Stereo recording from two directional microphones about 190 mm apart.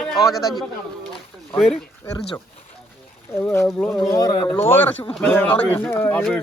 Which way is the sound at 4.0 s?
20° left (ahead or behind).